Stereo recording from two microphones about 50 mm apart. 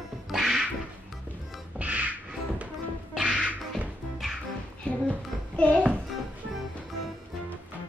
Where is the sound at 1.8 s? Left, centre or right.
Right.